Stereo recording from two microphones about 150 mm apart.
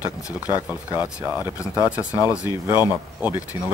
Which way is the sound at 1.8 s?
20° left (ahead or behind).